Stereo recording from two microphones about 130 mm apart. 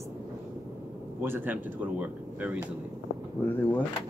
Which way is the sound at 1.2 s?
15° right (ahead or behind).